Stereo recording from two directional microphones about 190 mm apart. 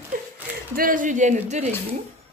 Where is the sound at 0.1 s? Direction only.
50° right (ahead or behind).